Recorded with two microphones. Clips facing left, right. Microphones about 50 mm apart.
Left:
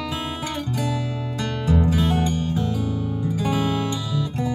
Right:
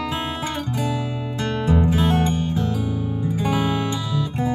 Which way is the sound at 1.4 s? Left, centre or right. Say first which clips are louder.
Right 2 dB; right.